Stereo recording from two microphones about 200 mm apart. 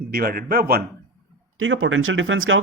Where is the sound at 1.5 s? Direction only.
80° right.